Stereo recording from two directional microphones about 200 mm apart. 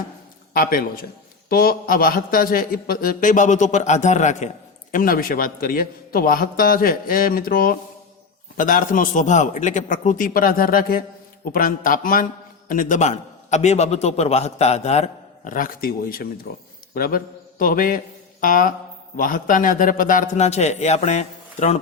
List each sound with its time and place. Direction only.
0.5 s a man's voice: 45° left (ahead or behind)